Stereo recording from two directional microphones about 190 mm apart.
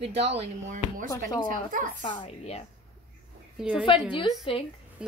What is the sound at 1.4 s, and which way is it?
Speech, 45° right (ahead or behind).